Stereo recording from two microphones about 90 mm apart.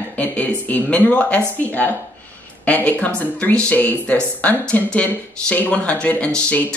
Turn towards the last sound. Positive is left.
turn(degrees=15)  # may be behind; listen again after turning